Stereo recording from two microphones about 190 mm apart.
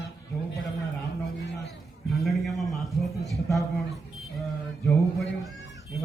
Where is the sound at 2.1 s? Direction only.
Centre (ahead or behind).